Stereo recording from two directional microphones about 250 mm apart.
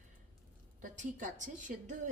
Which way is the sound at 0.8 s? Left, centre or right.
Right.